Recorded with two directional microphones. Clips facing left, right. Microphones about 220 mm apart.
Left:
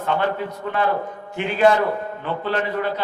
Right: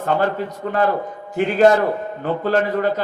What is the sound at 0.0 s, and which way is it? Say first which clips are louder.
Speech: right 3 dB; 40° right (ahead or behind).